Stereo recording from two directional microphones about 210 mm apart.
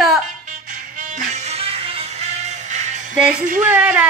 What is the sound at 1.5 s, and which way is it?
Music, 25° right (ahead or behind).